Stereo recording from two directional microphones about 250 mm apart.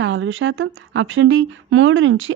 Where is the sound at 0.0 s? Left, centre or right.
Right.